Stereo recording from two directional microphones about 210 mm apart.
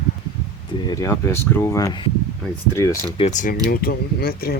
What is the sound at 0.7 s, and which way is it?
Speech, 15° left (ahead or behind).